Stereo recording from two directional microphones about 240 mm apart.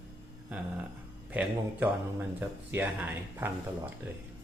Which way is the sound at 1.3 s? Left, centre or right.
Centre.